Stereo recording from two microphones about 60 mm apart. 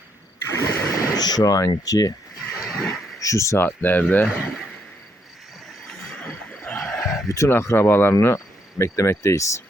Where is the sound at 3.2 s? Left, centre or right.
Left.